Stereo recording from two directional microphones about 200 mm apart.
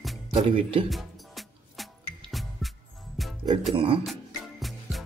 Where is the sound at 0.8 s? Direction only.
Centre (ahead or behind).